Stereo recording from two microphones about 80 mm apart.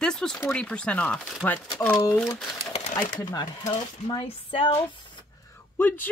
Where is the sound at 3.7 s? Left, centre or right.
Left.